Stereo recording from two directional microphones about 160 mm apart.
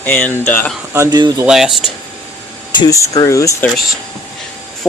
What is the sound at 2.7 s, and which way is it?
Speech, 20° left (ahead or behind).